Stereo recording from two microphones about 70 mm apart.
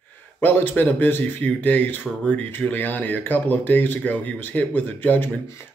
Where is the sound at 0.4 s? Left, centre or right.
Left.